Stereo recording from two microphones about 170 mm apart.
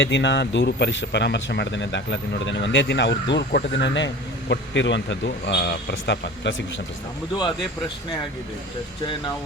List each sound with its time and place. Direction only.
0.0 s a man's voice: 90° left